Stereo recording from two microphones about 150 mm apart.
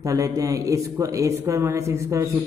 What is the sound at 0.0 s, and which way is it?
A man's voice, 20° right (ahead or behind).